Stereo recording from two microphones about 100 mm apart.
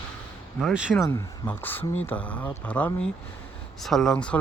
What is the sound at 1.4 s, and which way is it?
Speech, 20° left (ahead or behind).